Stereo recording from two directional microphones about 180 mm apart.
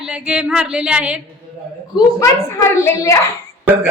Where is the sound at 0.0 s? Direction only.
5° right (ahead or behind).